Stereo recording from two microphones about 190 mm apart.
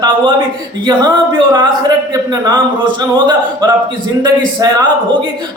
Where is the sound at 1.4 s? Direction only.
25° right (ahead or behind).